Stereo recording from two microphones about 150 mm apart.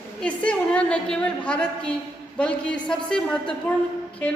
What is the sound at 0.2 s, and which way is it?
A woman's voice, 5° left (ahead or behind).